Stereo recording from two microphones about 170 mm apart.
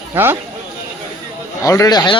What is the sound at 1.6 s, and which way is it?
Speech, 20° left (ahead or behind).